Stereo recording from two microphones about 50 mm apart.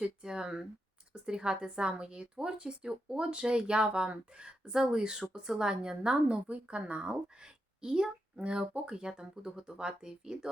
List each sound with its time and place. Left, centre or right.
0.0 s a woman's voice: centre